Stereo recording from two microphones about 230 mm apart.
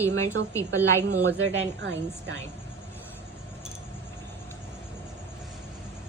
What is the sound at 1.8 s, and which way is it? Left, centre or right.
Speech, right.